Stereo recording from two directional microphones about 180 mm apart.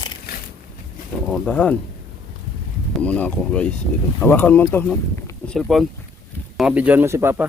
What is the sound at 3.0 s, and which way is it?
Speech, 5° left (ahead or behind).